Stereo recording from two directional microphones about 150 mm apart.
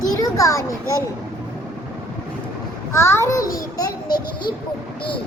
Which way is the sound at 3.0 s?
15° left (ahead or behind).